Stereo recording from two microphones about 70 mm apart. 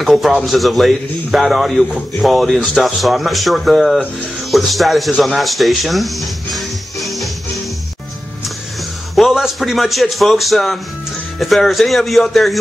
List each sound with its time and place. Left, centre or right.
0.0 s a man's voice: centre
9.3 s a man's voice: centre